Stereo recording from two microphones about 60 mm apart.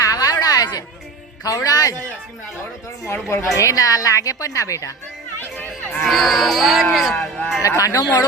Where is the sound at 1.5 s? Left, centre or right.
Left.